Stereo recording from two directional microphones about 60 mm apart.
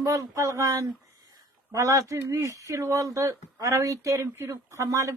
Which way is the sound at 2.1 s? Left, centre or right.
Right.